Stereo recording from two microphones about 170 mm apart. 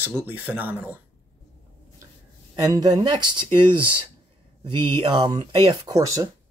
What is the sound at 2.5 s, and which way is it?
Speech, 25° right (ahead or behind).